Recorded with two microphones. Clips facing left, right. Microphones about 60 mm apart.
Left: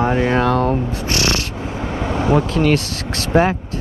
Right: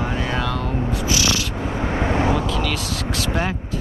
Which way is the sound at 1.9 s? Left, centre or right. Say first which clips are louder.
Right 1 dB; right.